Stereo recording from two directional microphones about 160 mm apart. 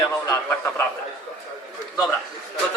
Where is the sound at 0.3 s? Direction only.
15° left (ahead or behind).